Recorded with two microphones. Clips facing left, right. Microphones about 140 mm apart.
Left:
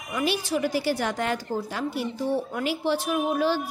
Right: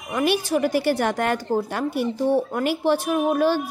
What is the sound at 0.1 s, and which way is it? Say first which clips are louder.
A woman's voice: right 5 dB; 55° right (ahead or behind).